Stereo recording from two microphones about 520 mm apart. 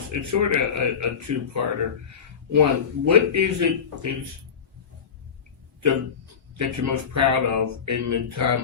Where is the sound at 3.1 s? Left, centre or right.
Right.